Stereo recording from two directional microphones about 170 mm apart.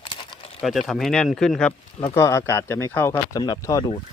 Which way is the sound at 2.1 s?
15° left (ahead or behind).